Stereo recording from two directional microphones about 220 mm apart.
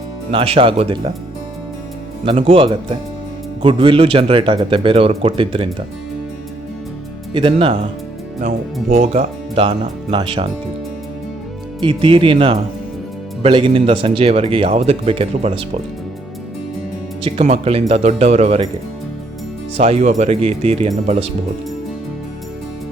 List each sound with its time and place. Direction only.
0.3 s speech: 25° right (ahead or behind)
2.2 s speech: 25° right (ahead or behind)
7.3 s speech: 25° right (ahead or behind)
8.4 s speech: 35° right (ahead or behind)
11.8 s speech: 25° right (ahead or behind)
17.2 s speech: 25° right (ahead or behind)
19.7 s speech: 25° right (ahead or behind)